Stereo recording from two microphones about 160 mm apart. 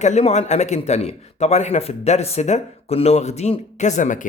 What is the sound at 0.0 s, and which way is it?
Speech, 45° left (ahead or behind).